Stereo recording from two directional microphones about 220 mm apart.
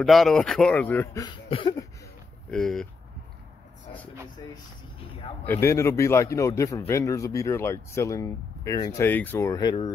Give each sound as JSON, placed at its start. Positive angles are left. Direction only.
{"t": 0.0, "sound": "speech", "side_deg": 0}
{"t": 1.2, "sound": "a sound", "side_deg": 20}
{"t": 2.5, "sound": "speech", "side_deg": 0}
{"t": 5.4, "sound": "speech", "side_deg": 10}